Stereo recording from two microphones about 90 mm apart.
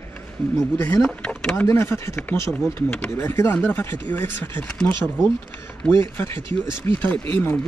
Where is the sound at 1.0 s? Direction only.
10° left (ahead or behind).